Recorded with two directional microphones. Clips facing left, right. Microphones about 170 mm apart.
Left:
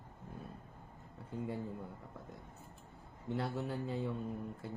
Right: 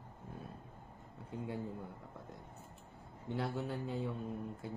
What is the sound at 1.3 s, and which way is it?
Speech, centre (ahead or behind).